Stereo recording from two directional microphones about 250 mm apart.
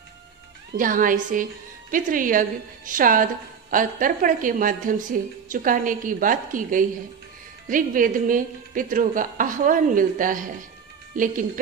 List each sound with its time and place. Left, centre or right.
0.7 s a woman's voice: right